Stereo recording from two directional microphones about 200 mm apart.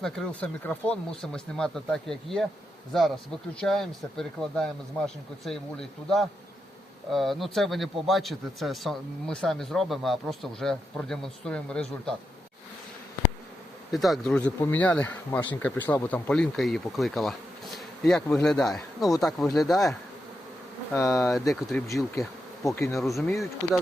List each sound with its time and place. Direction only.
0.0 s a man's voice: 5° left (ahead or behind)
3.6 s a man's voice: centre (ahead or behind)
13.9 s a man's voice: centre (ahead or behind)
20.9 s speech: 15° left (ahead or behind)
21.2 s a man's voice: centre (ahead or behind)
22.6 s speech: 15° left (ahead or behind)
23.0 s a man's voice: centre (ahead or behind)